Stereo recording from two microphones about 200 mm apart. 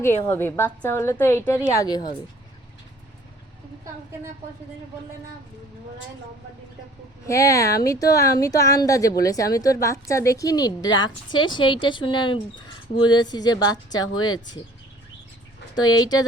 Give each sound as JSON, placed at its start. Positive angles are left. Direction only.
{"t": 0.3, "sound": "speech", "side_deg": 10}
{"t": 7.3, "sound": "speech", "side_deg": 15}
{"t": 15.7, "sound": "speech", "side_deg": 20}